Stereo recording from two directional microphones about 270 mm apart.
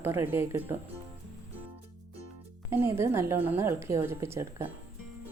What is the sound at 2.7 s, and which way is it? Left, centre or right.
A woman's voice, centre.